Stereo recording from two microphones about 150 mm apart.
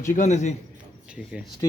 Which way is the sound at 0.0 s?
55° left (ahead or behind).